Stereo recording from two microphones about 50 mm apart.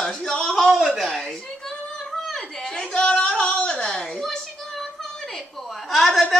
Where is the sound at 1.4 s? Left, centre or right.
Centre.